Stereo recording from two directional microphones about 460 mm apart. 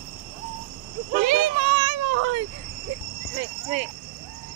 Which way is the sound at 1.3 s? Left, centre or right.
Right.